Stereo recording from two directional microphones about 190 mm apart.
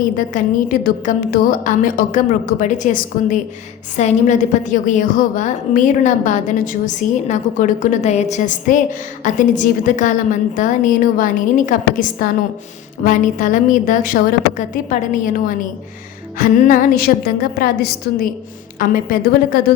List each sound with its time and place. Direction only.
0.3 s a woman's voice: 45° left (ahead or behind)